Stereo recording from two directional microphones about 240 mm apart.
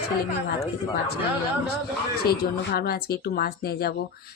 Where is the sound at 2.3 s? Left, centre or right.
Left.